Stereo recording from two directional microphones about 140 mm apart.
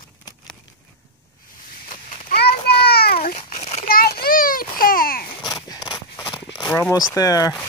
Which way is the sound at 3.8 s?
90° left.